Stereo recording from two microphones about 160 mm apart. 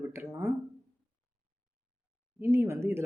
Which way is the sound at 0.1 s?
15° right (ahead or behind).